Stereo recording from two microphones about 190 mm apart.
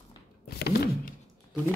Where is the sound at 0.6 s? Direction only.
55° left (ahead or behind).